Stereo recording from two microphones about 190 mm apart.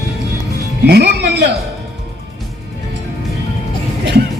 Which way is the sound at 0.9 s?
60° right (ahead or behind).